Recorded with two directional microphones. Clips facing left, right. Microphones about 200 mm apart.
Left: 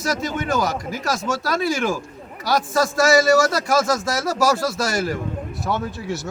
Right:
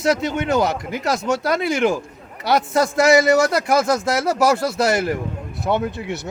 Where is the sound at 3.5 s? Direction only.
60° right (ahead or behind).